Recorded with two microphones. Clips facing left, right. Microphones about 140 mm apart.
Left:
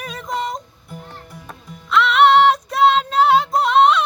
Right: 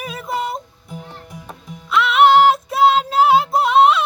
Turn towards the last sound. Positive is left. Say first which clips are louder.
# right 1 dB
turn(degrees=-5)  # may be behind; listen again after turning